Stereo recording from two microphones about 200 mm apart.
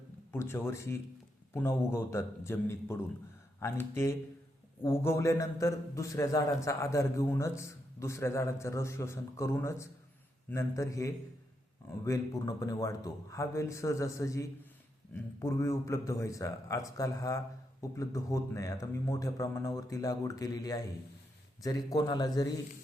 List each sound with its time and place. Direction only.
0.3 s a man's voice: 10° left (ahead or behind)